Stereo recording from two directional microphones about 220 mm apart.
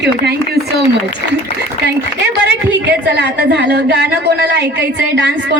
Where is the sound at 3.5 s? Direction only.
50° right (ahead or behind).